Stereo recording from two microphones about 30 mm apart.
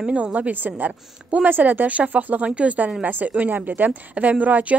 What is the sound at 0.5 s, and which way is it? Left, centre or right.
Speech, right.